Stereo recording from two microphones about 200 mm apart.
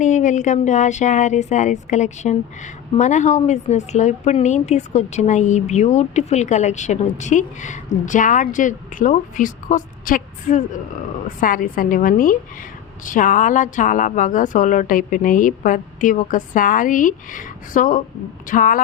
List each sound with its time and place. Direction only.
0.0 s a woman's voice: 40° left (ahead or behind)